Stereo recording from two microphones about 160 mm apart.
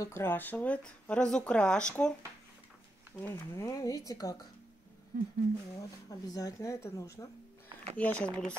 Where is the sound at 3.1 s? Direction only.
15° left (ahead or behind).